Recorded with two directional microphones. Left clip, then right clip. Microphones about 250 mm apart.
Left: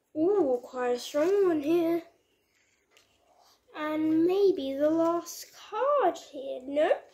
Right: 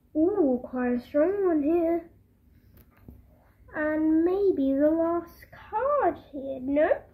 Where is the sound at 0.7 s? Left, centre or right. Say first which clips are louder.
Right 2 dB; left.